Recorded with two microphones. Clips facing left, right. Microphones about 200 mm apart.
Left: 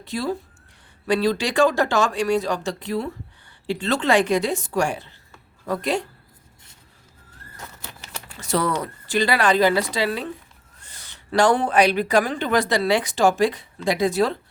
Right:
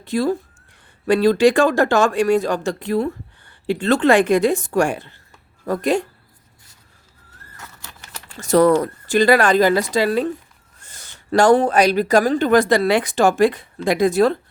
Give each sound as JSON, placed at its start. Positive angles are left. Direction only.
{"t": 0.0, "sound": "speech", "side_deg": -50}
{"t": 7.5, "sound": "vehicle", "side_deg": 15}
{"t": 8.4, "sound": "speech", "side_deg": -45}